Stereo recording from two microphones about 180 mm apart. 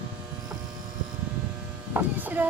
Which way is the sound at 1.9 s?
10° right (ahead or behind).